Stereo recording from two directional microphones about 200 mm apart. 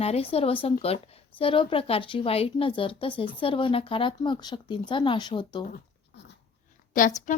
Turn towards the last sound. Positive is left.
turn(degrees=40)  # may be behind; listen again after turning